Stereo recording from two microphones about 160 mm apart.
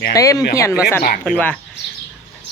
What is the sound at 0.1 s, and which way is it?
Speech, 20° left (ahead or behind).